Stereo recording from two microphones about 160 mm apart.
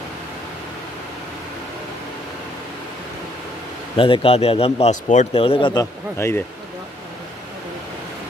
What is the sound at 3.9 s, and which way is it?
A man's voice, 35° left (ahead or behind).